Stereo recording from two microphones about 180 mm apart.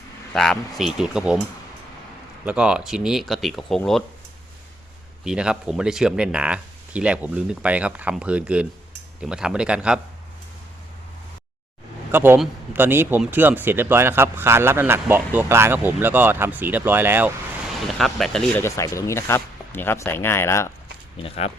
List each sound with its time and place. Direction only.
0.3 s speech: centre (ahead or behind)
2.4 s speech: 5° right (ahead or behind)
5.2 s speech: 5° right (ahead or behind)
12.1 s speech: 10° right (ahead or behind)
17.8 s speech: centre (ahead or behind)
18.6 s speech: 15° left (ahead or behind)
21.2 s speech: 35° left (ahead or behind)